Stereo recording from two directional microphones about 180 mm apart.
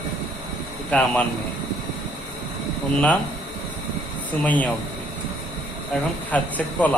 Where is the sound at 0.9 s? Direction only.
5° left (ahead or behind).